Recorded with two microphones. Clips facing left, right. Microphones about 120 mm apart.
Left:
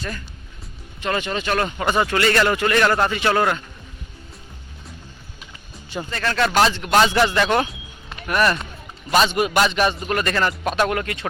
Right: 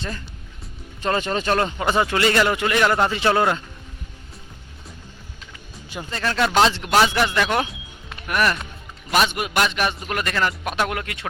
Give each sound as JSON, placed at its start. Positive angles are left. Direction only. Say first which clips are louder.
{"t": 1.0, "sound": "speech", "louder": "right 2 dB", "side_deg": -35}
{"t": 1.8, "sound": "speech", "louder": "even", "side_deg": -20}
{"t": 6.1, "sound": "speech", "louder": "even", "side_deg": -20}
{"t": 7.1, "sound": "a man's voice", "louder": "left 3 dB", "side_deg": 0}